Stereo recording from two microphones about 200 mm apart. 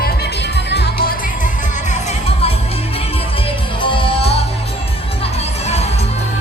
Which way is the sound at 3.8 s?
30° left (ahead or behind).